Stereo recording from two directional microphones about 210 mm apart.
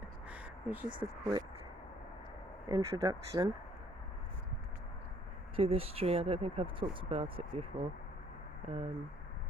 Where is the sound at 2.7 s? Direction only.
20° right (ahead or behind).